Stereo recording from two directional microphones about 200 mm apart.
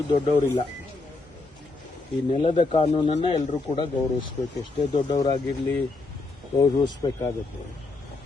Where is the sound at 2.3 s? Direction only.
25° left (ahead or behind).